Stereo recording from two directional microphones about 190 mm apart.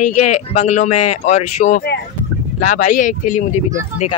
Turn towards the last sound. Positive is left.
turn(degrees=40)  # may be behind; listen again after turning